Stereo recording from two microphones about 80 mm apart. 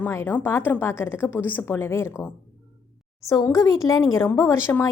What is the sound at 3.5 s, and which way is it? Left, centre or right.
A woman's voice, left.